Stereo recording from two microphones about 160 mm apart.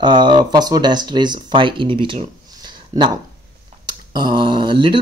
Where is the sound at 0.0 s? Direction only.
30° right (ahead or behind).